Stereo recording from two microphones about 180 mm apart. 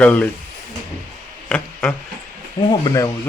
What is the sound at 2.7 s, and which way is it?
Speech, 20° left (ahead or behind).